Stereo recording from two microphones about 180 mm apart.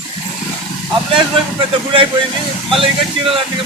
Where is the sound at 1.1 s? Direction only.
30° right (ahead or behind).